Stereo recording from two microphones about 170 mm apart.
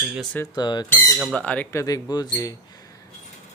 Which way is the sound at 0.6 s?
25° left (ahead or behind).